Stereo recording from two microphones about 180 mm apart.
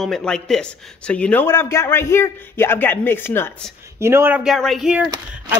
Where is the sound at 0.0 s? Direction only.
5° left (ahead or behind).